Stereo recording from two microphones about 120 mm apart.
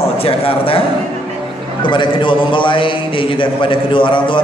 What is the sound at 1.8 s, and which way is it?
A man's voice, 40° left (ahead or behind).